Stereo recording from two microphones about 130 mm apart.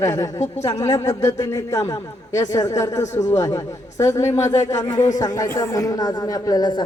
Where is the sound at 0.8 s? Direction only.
25° left (ahead or behind).